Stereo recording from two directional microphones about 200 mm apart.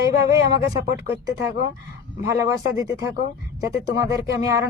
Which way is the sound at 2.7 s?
15° right (ahead or behind).